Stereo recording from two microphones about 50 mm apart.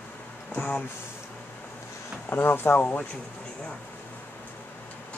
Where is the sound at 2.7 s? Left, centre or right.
Left.